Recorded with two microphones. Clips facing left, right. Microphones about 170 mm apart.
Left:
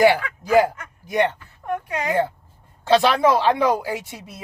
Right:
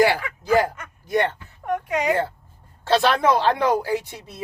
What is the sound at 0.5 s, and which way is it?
Speech, 10° left (ahead or behind).